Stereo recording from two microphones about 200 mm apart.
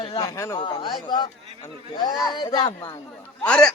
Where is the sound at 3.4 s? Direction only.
5° left (ahead or behind).